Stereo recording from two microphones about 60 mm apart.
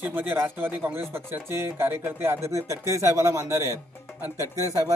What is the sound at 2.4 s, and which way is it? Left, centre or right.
Speech, right.